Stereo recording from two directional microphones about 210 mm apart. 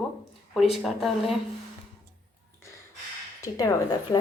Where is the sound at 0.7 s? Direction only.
Centre (ahead or behind).